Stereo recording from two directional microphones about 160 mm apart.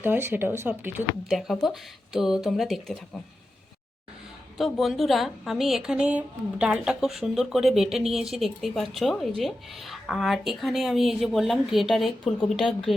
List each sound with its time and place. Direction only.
0.0 s speech: 15° right (ahead or behind)
1.3 s a woman's voice: centre (ahead or behind)
4.5 s a woman's voice: centre (ahead or behind)